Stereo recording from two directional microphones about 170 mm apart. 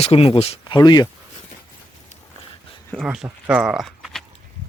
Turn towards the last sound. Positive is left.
turn(degrees=0)  # may be behind; listen again after turning